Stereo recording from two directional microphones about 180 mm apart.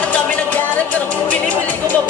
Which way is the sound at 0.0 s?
10° left (ahead or behind).